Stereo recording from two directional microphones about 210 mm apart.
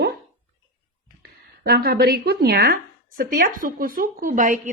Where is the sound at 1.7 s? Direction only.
45° right (ahead or behind).